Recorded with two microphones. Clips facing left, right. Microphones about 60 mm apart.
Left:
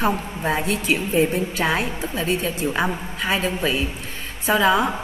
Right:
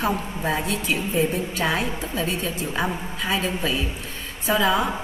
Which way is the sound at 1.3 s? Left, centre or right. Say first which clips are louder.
Left 2 dB; centre.